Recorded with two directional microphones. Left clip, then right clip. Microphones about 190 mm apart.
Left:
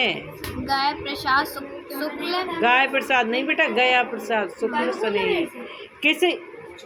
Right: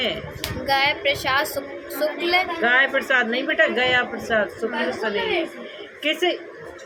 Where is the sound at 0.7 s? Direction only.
65° right (ahead or behind).